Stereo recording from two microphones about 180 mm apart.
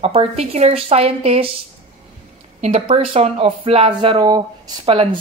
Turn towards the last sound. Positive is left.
turn(degrees=-30)  # may be behind; listen again after turning